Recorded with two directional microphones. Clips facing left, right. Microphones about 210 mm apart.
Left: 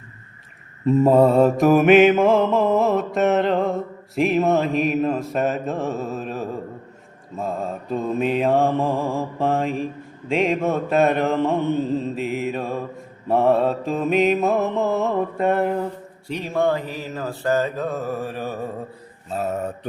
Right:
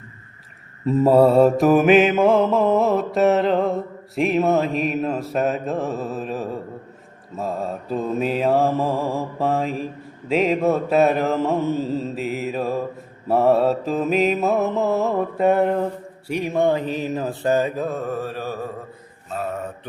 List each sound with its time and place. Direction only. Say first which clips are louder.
0.9 s mantra: even; centre (ahead or behind)
16.3 s speech: right 2 dB; 15° right (ahead or behind)
17.8 s mantra: even; 5° left (ahead or behind)
19.3 s mantra: left 2 dB; 40° left (ahead or behind)